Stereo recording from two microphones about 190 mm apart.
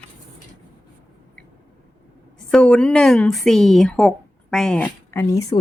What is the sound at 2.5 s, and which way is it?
A woman's voice, 5° left (ahead or behind).